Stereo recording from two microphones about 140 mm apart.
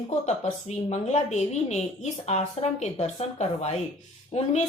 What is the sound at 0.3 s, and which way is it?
Speech, 55° left (ahead or behind).